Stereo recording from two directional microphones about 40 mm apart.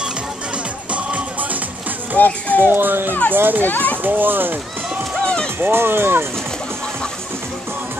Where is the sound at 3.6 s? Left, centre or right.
Left.